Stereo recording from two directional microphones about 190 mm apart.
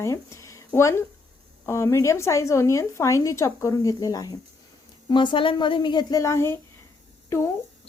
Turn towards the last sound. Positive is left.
turn(degrees=15)  # may be behind; listen again after turning